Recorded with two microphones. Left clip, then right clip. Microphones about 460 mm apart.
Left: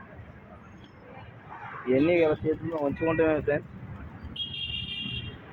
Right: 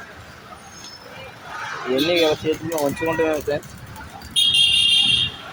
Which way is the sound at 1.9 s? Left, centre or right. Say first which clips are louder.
Right 4 dB; left.